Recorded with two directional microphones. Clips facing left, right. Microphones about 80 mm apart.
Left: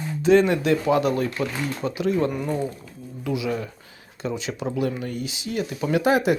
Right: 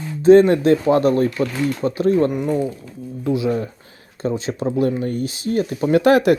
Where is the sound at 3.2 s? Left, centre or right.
Right.